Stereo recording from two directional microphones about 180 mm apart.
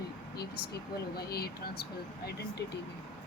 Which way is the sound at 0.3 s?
60° left (ahead or behind).